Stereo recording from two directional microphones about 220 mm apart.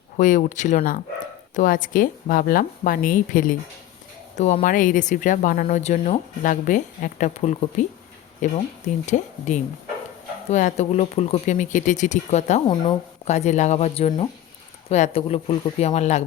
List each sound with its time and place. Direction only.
0.2 s speech: 35° left (ahead or behind)